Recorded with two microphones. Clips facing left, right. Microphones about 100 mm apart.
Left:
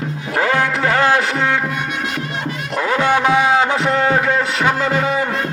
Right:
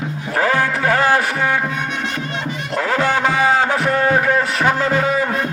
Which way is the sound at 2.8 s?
20° left (ahead or behind).